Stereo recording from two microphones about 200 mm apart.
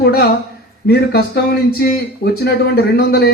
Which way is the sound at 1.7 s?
50° left (ahead or behind).